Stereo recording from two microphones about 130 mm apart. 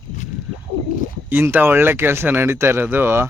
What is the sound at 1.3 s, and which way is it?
Speech, 15° right (ahead or behind).